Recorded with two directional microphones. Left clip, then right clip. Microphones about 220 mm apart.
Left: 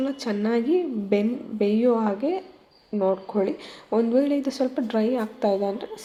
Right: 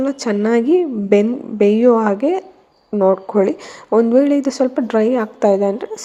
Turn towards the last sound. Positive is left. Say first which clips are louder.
# right 9 dB
turn(degrees=-30)  # may be behind; listen again after turning